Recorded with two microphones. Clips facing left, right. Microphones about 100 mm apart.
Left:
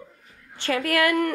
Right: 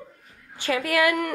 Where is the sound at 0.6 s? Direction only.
5° right (ahead or behind).